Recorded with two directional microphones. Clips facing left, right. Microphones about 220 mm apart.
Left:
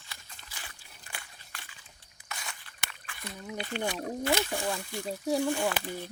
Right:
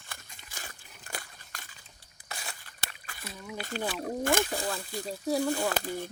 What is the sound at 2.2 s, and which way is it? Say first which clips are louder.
Crunch: right 1 dB; 35° right (ahead or behind).